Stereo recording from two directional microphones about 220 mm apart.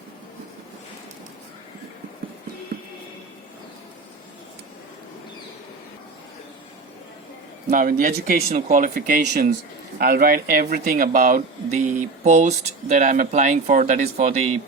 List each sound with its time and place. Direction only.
7.7 s speech: 40° right (ahead or behind)